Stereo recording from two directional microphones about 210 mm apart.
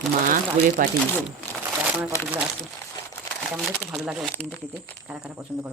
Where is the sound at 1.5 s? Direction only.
10° left (ahead or behind).